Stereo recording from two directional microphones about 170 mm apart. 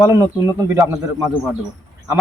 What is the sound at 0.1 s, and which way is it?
Speech, 15° right (ahead or behind).